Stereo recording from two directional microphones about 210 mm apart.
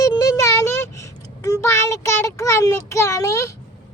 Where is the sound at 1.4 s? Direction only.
15° left (ahead or behind).